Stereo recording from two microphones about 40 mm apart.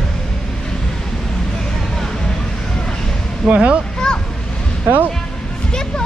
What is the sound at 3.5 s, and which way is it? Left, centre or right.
Speech, right.